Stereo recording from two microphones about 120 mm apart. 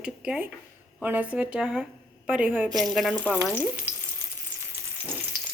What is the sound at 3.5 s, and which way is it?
Frying, 15° right (ahead or behind).